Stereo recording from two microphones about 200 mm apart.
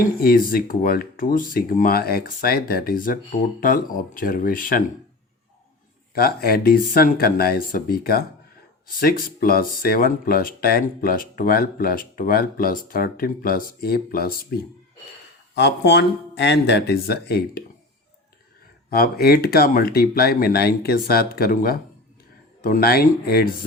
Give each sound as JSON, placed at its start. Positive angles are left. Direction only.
{"t": 0.2, "sound": "speech", "side_deg": 45}
{"t": 6.1, "sound": "speech", "side_deg": 50}
{"t": 15.5, "sound": "speech", "side_deg": 60}
{"t": 18.9, "sound": "speech", "side_deg": 50}